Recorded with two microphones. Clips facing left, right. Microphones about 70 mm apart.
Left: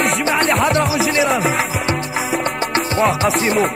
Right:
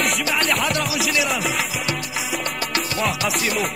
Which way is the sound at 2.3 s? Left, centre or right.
Left.